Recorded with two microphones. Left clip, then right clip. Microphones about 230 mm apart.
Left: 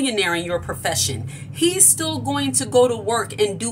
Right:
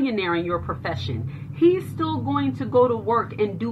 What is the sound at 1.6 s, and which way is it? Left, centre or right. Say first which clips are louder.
Speech: even; left.